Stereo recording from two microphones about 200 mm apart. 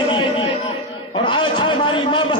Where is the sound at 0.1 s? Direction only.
25° left (ahead or behind).